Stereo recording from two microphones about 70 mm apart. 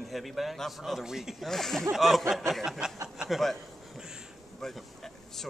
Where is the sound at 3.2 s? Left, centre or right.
Centre.